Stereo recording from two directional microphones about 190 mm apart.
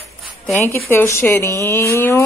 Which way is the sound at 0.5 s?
10° left (ahead or behind).